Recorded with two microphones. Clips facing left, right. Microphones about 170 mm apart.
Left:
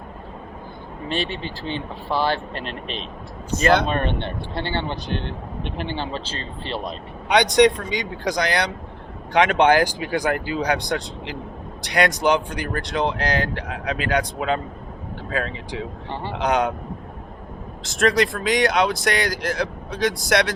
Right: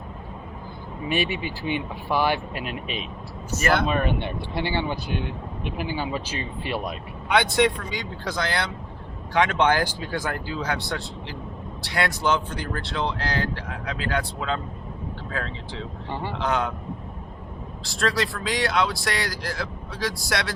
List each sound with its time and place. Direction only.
1.0 s speech: 10° right (ahead or behind)
7.3 s speech: 20° left (ahead or behind)
16.3 s speech: 20° left (ahead or behind)
17.8 s speech: 20° left (ahead or behind)